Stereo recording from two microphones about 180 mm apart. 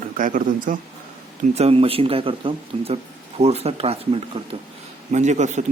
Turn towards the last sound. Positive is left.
turn(degrees=-40)  # may be behind; listen again after turning